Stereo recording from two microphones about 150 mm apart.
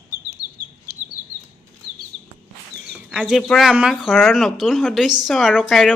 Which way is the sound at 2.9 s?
10° right (ahead or behind).